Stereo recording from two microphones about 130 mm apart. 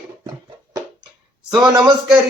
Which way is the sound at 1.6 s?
30° right (ahead or behind).